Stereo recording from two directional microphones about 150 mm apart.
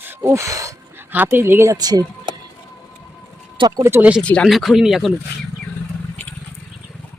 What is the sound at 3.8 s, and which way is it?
Speech, 15° right (ahead or behind).